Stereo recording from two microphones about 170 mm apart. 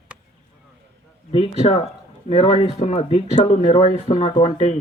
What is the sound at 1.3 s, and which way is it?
Speech, 35° left (ahead or behind).